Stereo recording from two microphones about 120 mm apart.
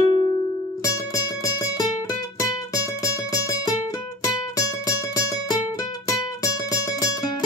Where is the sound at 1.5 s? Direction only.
30° left (ahead or behind).